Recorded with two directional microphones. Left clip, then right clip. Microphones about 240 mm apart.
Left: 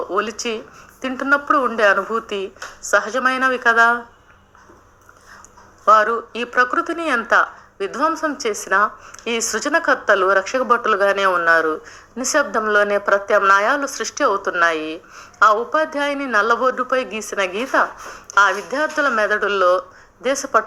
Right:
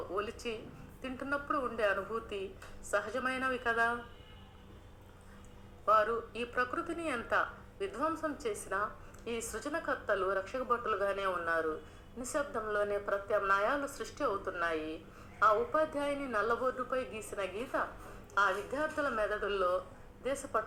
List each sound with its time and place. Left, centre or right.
0.1 s a woman's voice: left
5.8 s a woman's voice: left